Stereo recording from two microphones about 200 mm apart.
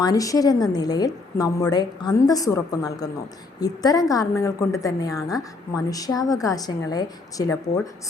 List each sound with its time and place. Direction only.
0.0 s a woman's voice: 15° left (ahead or behind)